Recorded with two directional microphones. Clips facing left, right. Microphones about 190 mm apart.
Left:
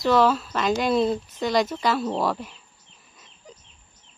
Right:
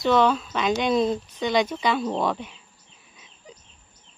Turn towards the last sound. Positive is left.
turn(degrees=0)  # may be behind; listen again after turning